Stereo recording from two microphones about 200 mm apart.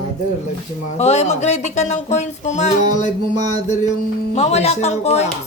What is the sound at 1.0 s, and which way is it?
Speech, 30° left (ahead or behind).